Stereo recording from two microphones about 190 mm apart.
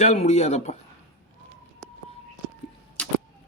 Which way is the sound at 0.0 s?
35° left (ahead or behind).